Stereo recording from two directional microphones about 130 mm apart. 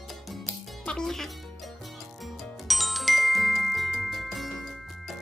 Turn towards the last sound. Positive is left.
turn(degrees=0)  # may be behind; listen again after turning